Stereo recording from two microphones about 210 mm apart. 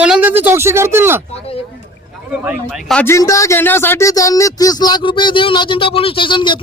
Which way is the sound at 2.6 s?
5° left (ahead or behind).